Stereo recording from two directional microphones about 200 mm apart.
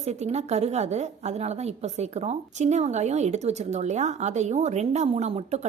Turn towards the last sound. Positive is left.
turn(degrees=-30)  # may be behind; listen again after turning